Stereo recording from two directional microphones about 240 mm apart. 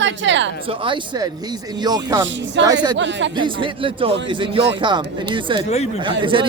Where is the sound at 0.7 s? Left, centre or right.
Right.